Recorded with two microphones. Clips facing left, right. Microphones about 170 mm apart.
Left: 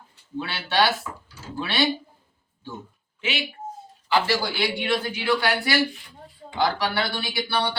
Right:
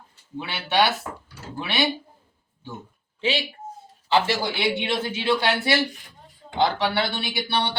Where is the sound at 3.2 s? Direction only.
35° right (ahead or behind).